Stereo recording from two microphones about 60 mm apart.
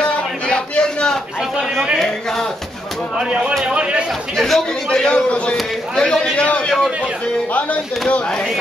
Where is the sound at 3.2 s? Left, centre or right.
Centre.